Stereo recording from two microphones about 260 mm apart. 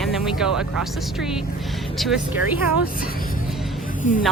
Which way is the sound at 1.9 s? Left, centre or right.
Centre.